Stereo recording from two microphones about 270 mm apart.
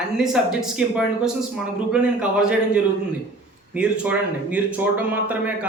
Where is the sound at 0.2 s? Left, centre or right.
Centre.